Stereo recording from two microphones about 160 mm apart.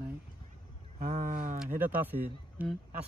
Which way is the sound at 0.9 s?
60° right (ahead or behind).